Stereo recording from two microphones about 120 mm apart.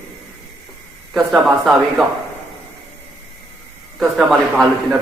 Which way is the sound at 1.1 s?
Centre (ahead or behind).